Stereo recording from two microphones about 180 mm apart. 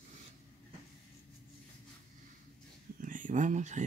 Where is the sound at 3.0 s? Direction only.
45° right (ahead or behind).